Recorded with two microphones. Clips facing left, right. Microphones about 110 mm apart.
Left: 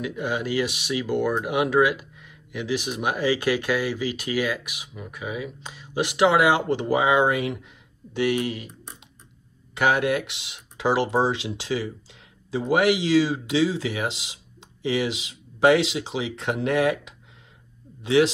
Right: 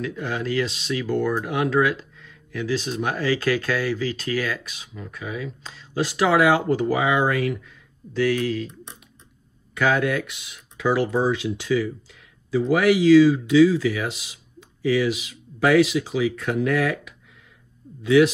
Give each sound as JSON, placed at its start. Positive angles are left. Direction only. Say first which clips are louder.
{"t": 0.0, "sound": "speech", "louder": "even", "side_deg": 15}
{"t": 9.8, "sound": "speech", "louder": "even", "side_deg": 25}